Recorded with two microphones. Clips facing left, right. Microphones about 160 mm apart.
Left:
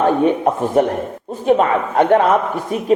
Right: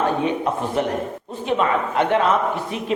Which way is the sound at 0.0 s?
50° left (ahead or behind).